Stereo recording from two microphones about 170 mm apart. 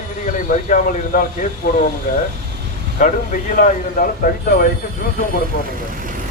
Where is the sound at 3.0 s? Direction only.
45° left (ahead or behind).